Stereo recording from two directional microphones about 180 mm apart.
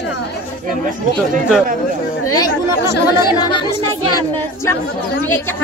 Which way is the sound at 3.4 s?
25° left (ahead or behind).